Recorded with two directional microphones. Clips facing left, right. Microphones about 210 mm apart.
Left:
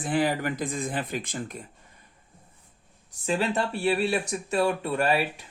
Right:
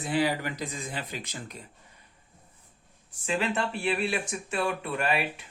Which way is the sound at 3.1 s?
35° left (ahead or behind).